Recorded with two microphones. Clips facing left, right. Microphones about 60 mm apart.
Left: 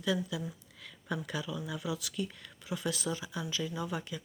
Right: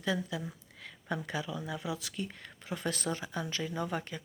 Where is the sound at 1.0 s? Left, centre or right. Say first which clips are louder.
Right 1 dB; right.